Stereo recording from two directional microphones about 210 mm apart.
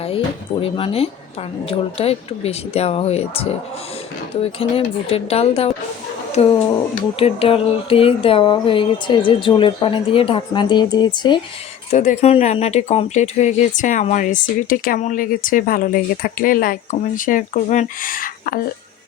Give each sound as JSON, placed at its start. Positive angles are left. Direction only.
{"t": 0.6, "sound": "speech", "side_deg": 30}
{"t": 11.9, "sound": "speech", "side_deg": 30}